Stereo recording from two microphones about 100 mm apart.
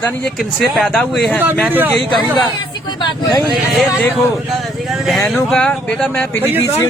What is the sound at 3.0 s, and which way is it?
Speech, 45° left (ahead or behind).